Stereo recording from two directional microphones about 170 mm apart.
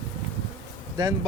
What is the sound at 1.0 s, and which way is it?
Speech, 25° right (ahead or behind).